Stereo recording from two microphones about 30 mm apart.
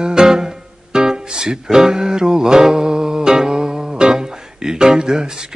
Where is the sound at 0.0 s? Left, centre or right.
Right.